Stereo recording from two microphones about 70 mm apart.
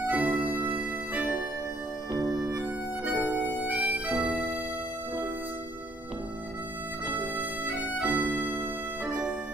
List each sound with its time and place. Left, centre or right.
0.0 s music: right
2.5 s music: right
7.2 s music: right
9.0 s music: centre